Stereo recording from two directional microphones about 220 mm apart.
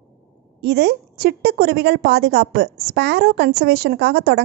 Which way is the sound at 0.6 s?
50° right (ahead or behind).